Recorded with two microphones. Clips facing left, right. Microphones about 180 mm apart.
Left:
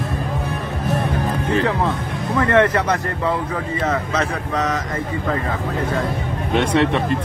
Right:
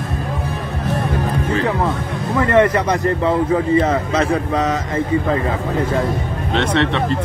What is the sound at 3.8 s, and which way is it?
Speech, 30° right (ahead or behind).